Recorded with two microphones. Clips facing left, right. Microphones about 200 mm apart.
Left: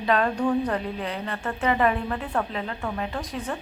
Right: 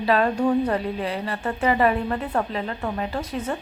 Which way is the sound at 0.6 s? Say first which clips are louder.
Right 3 dB; 5° right (ahead or behind).